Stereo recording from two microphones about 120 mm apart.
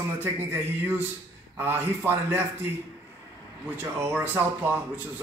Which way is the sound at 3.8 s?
15° right (ahead or behind).